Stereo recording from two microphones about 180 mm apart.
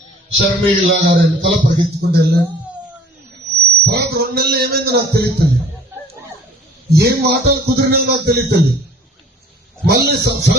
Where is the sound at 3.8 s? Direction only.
60° right (ahead or behind).